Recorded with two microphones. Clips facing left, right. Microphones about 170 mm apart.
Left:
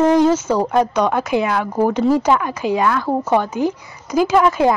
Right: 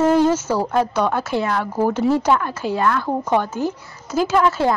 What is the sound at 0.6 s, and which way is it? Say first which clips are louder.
Speech: left 3 dB; 10° left (ahead or behind).